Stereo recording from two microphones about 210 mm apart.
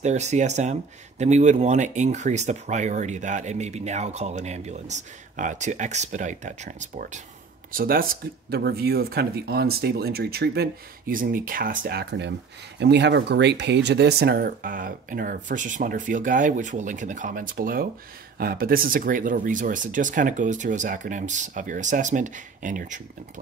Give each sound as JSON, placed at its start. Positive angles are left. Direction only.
{"t": 0.0, "sound": "speech", "side_deg": -35}